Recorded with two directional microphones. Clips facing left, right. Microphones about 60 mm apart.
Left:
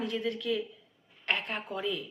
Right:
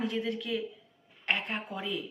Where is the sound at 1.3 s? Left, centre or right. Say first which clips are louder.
Even; right.